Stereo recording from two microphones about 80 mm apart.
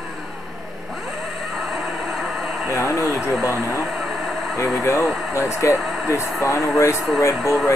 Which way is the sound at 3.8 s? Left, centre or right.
Centre.